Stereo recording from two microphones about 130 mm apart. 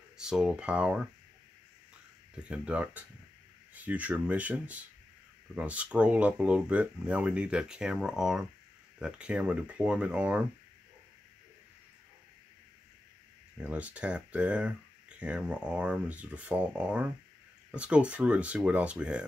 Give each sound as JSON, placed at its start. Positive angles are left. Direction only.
{"t": 0.2, "sound": "speech", "side_deg": -5}
{"t": 2.3, "sound": "speech", "side_deg": -10}
{"t": 13.6, "sound": "speech", "side_deg": -10}